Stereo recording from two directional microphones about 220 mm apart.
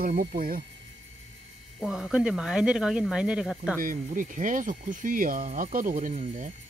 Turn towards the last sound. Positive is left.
turn(degrees=-35)  # may be behind; listen again after turning